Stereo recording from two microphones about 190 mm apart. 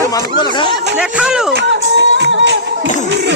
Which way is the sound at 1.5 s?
65° right (ahead or behind).